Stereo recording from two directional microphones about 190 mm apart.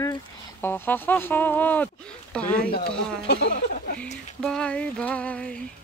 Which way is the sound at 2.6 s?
55° left (ahead or behind).